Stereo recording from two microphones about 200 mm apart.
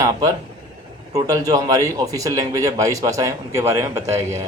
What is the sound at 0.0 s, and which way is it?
A man's voice, 20° right (ahead or behind).